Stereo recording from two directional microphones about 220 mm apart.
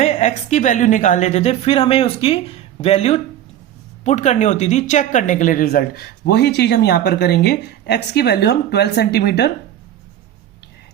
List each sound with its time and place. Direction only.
0.0 s a woman's voice: 30° left (ahead or behind); by 9.5 s 50° left (ahead or behind)